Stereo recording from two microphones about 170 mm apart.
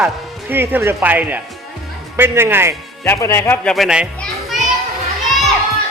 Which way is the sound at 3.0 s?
15° left (ahead or behind).